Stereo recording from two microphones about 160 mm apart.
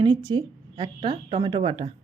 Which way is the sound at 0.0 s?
25° right (ahead or behind).